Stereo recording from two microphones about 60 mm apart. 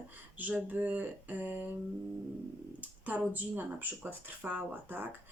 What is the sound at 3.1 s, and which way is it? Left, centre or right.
Speech, right.